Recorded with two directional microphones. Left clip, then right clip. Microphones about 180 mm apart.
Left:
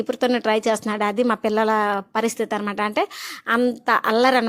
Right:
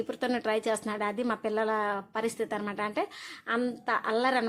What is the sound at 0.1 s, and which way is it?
A woman's voice, 35° left (ahead or behind).